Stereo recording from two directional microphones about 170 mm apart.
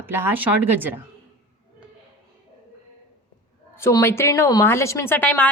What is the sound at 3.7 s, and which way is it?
A woman's voice, 15° left (ahead or behind).